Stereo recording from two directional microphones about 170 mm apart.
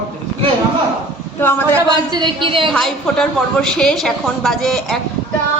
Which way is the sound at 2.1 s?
30° right (ahead or behind).